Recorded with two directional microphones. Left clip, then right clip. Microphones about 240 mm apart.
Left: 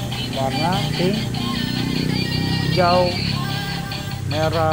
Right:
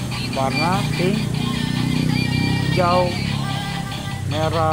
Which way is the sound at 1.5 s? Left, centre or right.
Centre.